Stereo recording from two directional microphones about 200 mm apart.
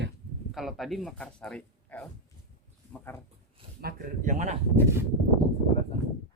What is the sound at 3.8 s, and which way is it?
Speech, 50° right (ahead or behind).